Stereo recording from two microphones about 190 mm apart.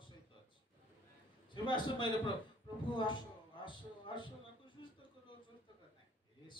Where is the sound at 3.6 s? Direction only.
25° left (ahead or behind).